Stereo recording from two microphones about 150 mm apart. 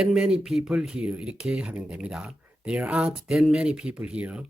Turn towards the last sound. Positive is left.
turn(degrees=-10)  # may be behind; listen again after turning